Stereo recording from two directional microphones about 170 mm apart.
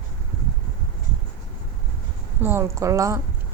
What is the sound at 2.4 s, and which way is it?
Speech, 15° right (ahead or behind).